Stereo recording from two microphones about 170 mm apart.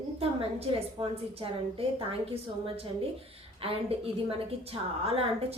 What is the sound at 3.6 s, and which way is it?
A woman's voice, 35° right (ahead or behind).